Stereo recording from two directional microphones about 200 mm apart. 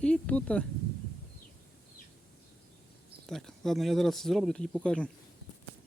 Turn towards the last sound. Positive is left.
turn(degrees=5)  # may be behind; listen again after turning